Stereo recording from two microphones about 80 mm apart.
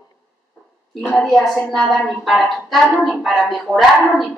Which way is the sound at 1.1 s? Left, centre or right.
Centre.